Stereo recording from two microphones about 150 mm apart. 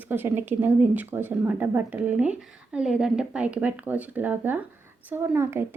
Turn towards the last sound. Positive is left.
turn(degrees=-15)  # may be behind; listen again after turning